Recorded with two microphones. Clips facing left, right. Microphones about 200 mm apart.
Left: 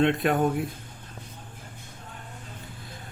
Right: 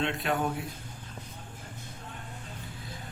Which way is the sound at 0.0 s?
55° left (ahead or behind).